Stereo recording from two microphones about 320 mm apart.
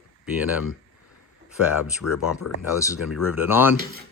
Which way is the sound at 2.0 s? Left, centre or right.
Left.